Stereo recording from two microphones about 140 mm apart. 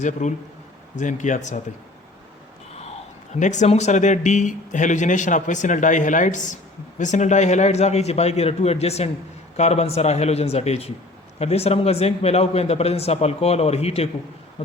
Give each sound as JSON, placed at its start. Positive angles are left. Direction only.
{"t": 0.0, "sound": "speech", "side_deg": 60}
{"t": 3.3, "sound": "a man's voice", "side_deg": 60}